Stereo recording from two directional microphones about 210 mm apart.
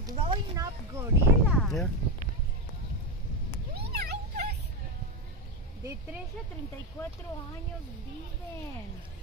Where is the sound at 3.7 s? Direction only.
50° right (ahead or behind).